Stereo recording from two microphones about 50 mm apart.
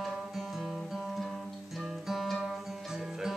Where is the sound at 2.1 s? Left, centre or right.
Centre.